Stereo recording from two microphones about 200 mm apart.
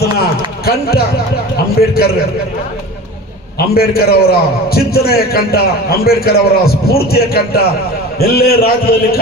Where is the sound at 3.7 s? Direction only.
50° left (ahead or behind).